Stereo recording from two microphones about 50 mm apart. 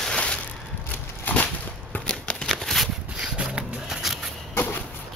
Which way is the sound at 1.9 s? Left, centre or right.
Left.